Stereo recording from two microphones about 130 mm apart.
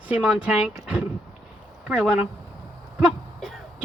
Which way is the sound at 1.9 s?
5° right (ahead or behind).